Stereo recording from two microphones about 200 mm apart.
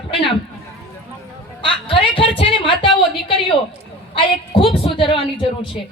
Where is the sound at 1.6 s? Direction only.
25° left (ahead or behind).